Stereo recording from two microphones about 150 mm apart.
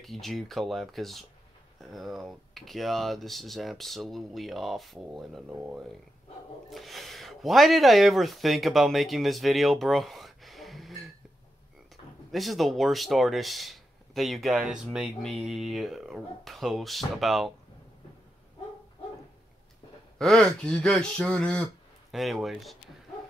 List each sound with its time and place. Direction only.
0.0 s speech: centre (ahead or behind)
12.3 s speech: centre (ahead or behind)
20.2 s speech: 5° left (ahead or behind)